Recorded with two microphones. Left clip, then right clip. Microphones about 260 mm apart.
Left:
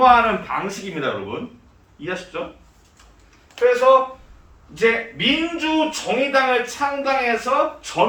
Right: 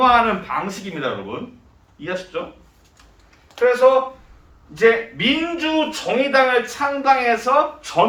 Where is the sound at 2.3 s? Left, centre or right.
Centre.